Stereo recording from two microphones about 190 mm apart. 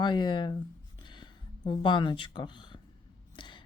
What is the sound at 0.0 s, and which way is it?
Speech, 25° left (ahead or behind).